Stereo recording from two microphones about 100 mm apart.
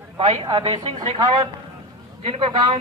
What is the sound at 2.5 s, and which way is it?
Speech, 50° right (ahead or behind).